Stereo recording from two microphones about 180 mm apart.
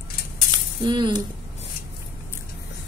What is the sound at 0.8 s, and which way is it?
Speech, 25° right (ahead or behind).